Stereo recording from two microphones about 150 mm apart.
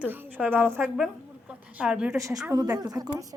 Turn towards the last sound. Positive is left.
turn(degrees=-25)  # may be behind; listen again after turning